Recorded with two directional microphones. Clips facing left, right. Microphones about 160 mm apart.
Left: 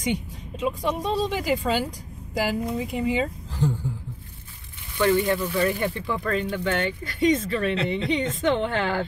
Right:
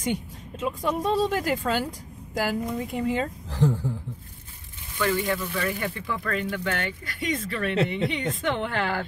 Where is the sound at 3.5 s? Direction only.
85° right.